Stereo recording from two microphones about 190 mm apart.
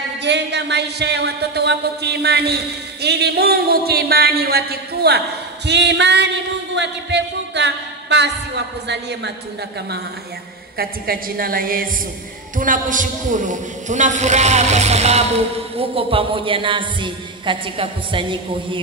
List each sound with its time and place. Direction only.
0.2 s speech: 65° right (ahead or behind)
5.7 s a sound: 65° right (ahead or behind)
8.8 s speech: 65° right (ahead or behind)
10.8 s a woman's voice: 50° right (ahead or behind); by 18.8 s 25° right (ahead or behind)